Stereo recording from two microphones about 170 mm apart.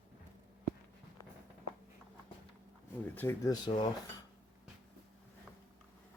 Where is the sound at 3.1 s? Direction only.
15° left (ahead or behind).